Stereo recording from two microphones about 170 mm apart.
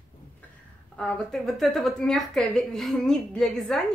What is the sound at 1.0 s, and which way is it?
A woman's voice, 5° left (ahead or behind).